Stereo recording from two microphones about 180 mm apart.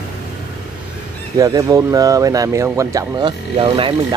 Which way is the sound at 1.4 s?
20° right (ahead or behind).